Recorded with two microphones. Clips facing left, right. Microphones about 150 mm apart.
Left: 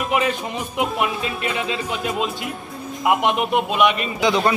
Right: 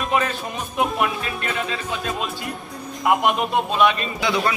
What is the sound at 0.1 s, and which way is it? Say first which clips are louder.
Speech: left 1 dB; 15° left (ahead or behind).